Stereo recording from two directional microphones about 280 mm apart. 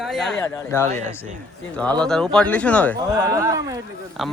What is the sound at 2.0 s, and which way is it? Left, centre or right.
Speech, centre.